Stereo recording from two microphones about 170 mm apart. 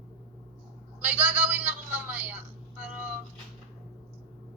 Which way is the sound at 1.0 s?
10° right (ahead or behind).